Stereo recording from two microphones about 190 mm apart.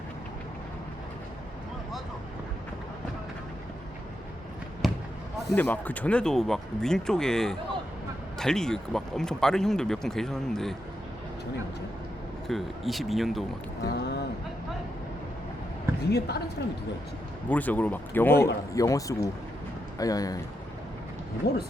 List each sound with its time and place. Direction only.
4.8 s basketball bounce: centre (ahead or behind)
5.5 s speech: 10° left (ahead or behind)
12.5 s speech: centre (ahead or behind)
13.8 s speech: 60° left (ahead or behind)
16.0 s speech: 60° left (ahead or behind)
17.5 s speech: 10° left (ahead or behind)
21.4 s speech: 60° left (ahead or behind)